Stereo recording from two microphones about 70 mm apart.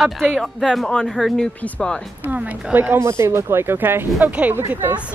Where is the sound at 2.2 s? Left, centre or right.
Right.